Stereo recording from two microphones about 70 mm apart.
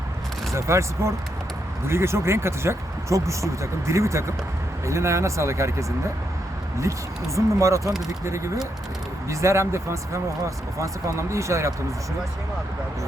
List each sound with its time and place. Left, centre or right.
0.5 s speech: right
7.3 s speech: right
9.3 s speech: right